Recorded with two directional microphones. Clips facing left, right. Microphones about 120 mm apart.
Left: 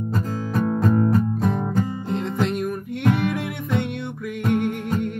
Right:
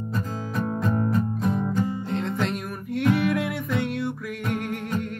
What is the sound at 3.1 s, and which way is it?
Music, centre (ahead or behind).